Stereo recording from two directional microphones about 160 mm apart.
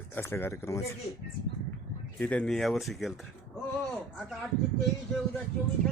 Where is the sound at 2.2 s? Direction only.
10° left (ahead or behind).